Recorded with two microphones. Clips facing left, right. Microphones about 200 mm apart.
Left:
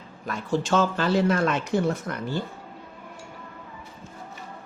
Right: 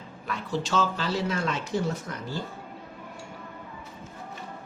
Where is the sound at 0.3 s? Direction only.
50° left (ahead or behind).